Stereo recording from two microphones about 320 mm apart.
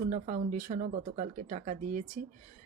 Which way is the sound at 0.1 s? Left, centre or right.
Right.